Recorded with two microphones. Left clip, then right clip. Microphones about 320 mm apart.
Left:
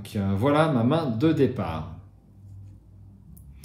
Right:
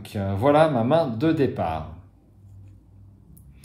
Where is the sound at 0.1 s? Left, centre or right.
Right.